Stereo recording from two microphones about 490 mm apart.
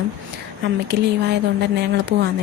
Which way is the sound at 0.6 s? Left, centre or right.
Right.